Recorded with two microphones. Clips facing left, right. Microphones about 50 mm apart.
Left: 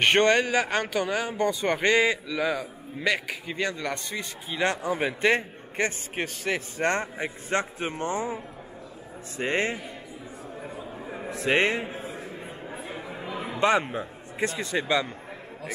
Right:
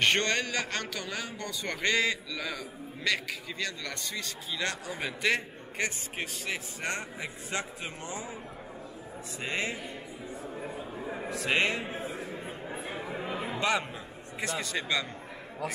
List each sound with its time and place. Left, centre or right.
0.0 s a man's voice: left
9.4 s a man's voice: left
11.0 s a sound: centre
11.2 s a man's voice: left
12.9 s chatter: centre
13.6 s a man's voice: left